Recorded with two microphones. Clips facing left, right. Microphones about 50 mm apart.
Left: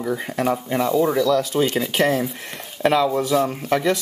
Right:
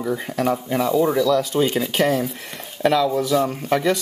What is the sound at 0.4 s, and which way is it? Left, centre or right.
Speech, centre.